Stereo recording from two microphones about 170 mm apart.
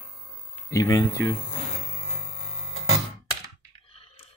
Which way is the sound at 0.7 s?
20° left (ahead or behind).